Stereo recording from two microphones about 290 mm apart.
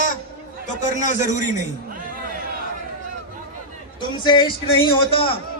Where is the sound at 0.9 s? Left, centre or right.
Left.